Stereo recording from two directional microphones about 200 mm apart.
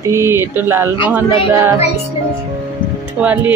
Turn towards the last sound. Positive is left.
turn(degrees=-5)  # may be behind; listen again after turning